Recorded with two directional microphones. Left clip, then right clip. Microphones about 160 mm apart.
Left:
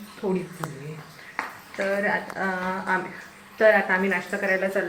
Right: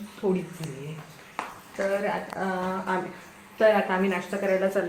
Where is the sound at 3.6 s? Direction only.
5° left (ahead or behind).